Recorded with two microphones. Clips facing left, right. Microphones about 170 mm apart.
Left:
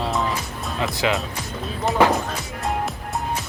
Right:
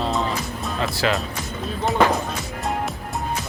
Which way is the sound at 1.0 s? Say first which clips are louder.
Even; 15° left (ahead or behind).